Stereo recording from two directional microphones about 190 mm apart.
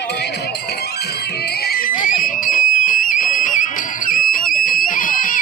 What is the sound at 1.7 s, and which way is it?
Screaming, 50° left (ahead or behind).